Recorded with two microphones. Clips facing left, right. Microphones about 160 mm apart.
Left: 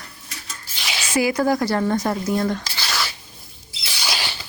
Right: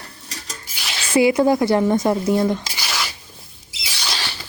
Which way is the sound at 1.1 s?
25° right (ahead or behind).